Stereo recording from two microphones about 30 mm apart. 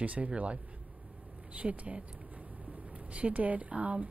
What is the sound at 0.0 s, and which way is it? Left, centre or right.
Speech, right.